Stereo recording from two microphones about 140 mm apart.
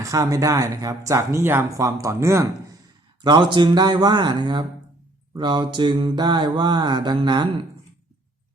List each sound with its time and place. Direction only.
0.0 s speech: 25° right (ahead or behind)
3.2 s mantra: 35° right (ahead or behind)